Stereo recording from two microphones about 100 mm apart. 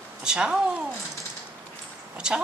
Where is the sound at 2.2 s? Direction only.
10° right (ahead or behind).